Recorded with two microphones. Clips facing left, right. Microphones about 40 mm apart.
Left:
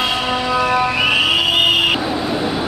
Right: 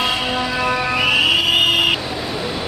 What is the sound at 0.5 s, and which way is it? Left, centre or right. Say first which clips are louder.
Music: left 6 dB; centre.